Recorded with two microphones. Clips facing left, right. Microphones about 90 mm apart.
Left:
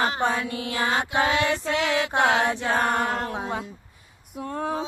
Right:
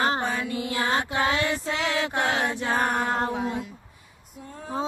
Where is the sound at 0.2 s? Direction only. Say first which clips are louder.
Left 3 dB; 80° left.